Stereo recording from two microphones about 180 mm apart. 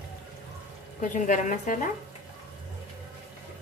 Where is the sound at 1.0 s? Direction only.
45° left (ahead or behind).